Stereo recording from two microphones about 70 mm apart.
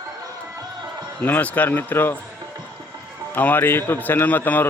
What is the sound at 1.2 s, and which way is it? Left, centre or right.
A man's voice, left.